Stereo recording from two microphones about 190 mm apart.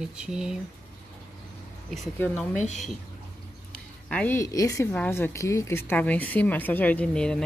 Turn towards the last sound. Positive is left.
turn(degrees=5)  # may be behind; listen again after turning